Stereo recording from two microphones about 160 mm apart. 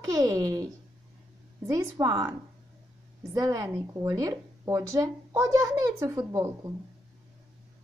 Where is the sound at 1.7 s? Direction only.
20° right (ahead or behind).